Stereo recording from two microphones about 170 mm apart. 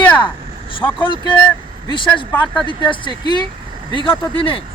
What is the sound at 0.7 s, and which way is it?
Speech, 30° left (ahead or behind).